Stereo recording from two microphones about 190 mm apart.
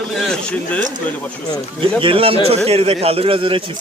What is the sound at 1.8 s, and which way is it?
A man's voice, 25° right (ahead or behind).